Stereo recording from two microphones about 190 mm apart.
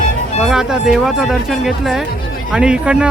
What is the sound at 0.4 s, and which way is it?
Speech, 5° right (ahead or behind).